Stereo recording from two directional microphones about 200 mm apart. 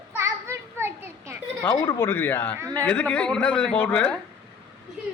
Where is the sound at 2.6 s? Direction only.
15° right (ahead or behind).